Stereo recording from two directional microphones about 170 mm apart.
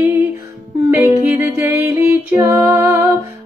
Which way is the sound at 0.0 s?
10° right (ahead or behind).